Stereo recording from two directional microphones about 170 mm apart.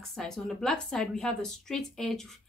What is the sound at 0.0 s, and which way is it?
A woman's voice, 5° left (ahead or behind).